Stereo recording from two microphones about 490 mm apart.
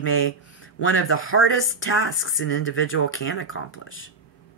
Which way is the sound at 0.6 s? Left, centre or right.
Left.